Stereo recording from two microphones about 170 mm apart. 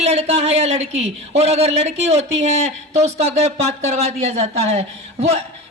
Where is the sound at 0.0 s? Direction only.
40° right (ahead or behind).